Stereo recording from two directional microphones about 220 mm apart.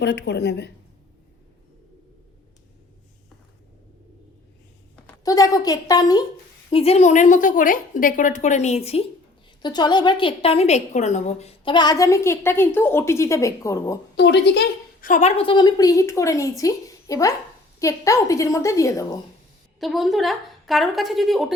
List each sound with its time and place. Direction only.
0.0 s a woman's voice: 50° left (ahead or behind)
5.0 s a woman's voice: 15° left (ahead or behind)
14.2 s a woman's voice: 50° left (ahead or behind)
15.0 s a woman's voice: 35° left (ahead or behind); by 19.0 s 15° left (ahead or behind)
19.8 s a woman's voice: centre (ahead or behind)